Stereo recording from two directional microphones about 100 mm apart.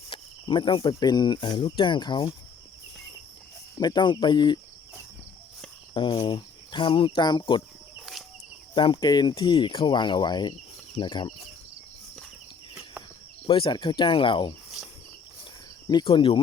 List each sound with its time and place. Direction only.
0.1 s speech: 55° left (ahead or behind)
3.8 s speech: 45° left (ahead or behind)
5.9 s speech: 60° left (ahead or behind)
7.9 s a sound: centre (ahead or behind)
8.7 s speech: 50° left (ahead or behind)
13.5 s speech: 55° left (ahead or behind)
16.0 s speech: 60° left (ahead or behind)